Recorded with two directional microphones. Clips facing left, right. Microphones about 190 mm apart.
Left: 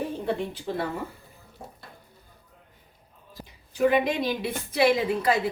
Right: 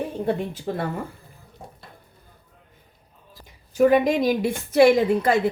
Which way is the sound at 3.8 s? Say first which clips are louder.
Right 5 dB; 40° right (ahead or behind).